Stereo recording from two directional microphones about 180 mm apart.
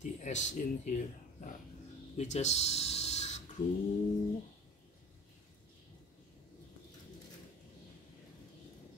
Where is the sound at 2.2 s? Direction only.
40° left (ahead or behind).